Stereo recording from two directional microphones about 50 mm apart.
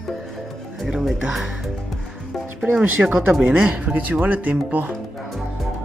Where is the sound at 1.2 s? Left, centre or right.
Centre.